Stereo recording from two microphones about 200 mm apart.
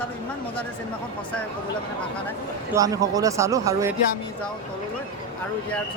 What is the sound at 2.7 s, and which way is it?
A man's voice, 15° right (ahead or behind).